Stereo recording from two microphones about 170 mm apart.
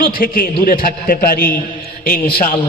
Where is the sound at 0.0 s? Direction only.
55° left (ahead or behind).